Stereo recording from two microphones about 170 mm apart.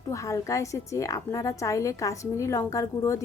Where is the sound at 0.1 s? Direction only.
20° left (ahead or behind).